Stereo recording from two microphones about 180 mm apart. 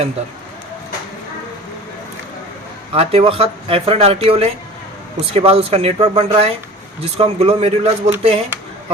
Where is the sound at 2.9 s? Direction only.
35° right (ahead or behind).